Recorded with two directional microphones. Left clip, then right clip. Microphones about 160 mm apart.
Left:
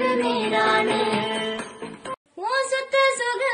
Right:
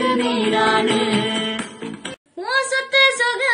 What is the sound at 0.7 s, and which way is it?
Music, 30° right (ahead or behind).